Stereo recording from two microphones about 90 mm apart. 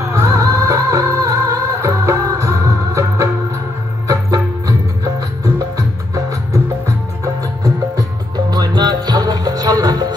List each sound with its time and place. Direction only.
0.0 s music: 35° right (ahead or behind)
8.5 s music: 50° right (ahead or behind)